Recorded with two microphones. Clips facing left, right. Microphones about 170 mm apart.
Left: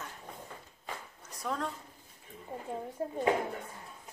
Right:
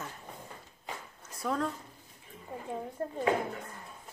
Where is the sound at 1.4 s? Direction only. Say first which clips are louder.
Right 3 dB; centre (ahead or behind).